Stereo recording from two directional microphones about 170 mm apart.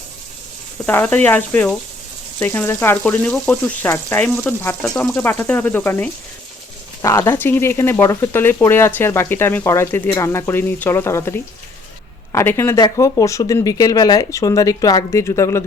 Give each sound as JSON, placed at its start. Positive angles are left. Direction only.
{"t": 0.9, "sound": "speech", "side_deg": 10}